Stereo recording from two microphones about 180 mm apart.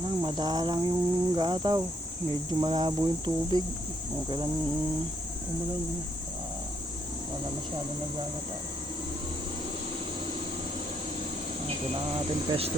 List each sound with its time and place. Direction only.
0.0 s cricket: 25° right (ahead or behind)
12.1 s speech: 35° right (ahead or behind)